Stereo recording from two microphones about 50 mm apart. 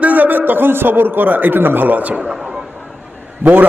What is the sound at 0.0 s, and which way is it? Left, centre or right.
A man's voice, right.